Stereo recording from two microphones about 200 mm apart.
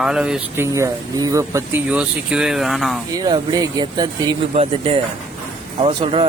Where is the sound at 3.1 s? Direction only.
20° right (ahead or behind).